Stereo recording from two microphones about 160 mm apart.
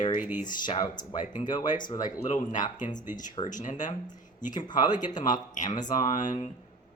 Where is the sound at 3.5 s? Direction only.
50° left (ahead or behind).